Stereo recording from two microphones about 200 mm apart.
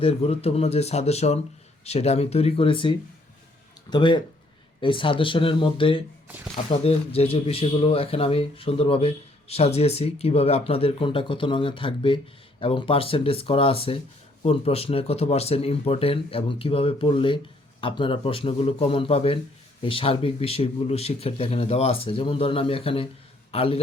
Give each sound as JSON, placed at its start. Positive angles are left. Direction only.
{"t": 0.0, "sound": "speech", "side_deg": 30}
{"t": 6.2, "sound": "speech", "side_deg": -10}
{"t": 6.7, "sound": "a man's voice", "side_deg": 30}